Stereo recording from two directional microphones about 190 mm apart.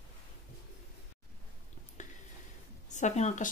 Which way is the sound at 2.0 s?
40° left (ahead or behind).